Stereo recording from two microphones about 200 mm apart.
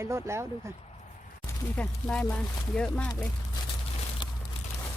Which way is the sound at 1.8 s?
5° left (ahead or behind).